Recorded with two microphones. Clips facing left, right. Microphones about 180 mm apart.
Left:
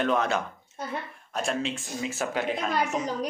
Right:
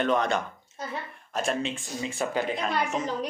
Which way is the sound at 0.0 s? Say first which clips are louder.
Even; centre (ahead or behind).